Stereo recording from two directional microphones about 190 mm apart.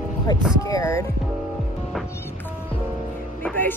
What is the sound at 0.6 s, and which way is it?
Speech, 15° left (ahead or behind).